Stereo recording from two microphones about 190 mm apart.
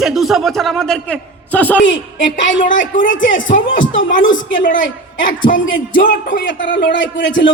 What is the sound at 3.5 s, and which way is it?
Speech, 45° left (ahead or behind).